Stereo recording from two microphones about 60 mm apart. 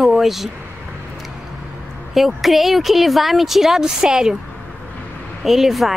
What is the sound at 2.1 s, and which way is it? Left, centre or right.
Speech, centre.